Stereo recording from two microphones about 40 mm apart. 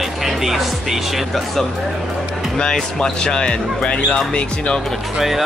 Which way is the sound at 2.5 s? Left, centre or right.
Centre.